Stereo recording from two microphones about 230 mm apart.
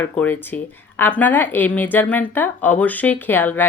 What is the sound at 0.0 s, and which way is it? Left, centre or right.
Speech, centre.